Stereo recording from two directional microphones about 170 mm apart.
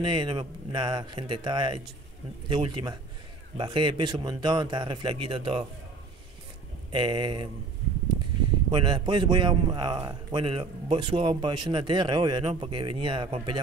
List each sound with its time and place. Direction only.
0.0 s a man's voice: 30° right (ahead or behind)
6.9 s a man's voice: 30° right (ahead or behind)
8.7 s a man's voice: 30° right (ahead or behind)